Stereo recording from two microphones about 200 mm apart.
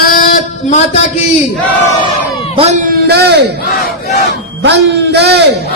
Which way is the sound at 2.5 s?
35° right (ahead or behind).